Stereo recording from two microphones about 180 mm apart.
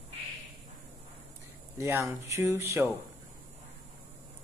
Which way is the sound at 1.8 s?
15° right (ahead or behind).